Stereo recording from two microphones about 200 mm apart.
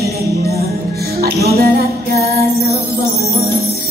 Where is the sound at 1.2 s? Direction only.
50° right (ahead or behind).